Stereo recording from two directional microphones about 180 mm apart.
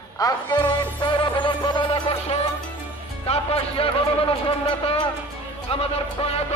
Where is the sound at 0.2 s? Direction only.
20° left (ahead or behind).